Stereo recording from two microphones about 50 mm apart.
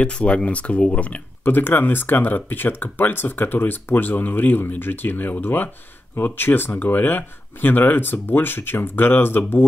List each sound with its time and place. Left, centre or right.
0.0 s speech: left
1.4 s speech: left